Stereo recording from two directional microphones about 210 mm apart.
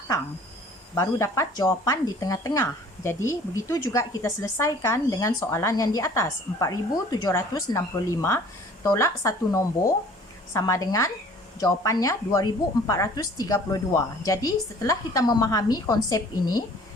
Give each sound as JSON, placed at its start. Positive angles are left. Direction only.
{"t": 0.9, "sound": "speech", "side_deg": 15}